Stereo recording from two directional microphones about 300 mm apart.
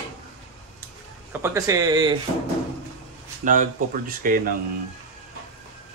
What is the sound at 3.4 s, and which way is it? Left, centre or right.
Speech, right.